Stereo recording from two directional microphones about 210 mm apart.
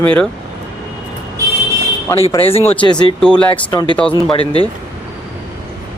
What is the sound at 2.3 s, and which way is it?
Speech, 25° left (ahead or behind).